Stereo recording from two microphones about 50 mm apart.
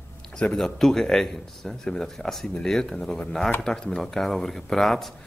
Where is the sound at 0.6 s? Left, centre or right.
Centre.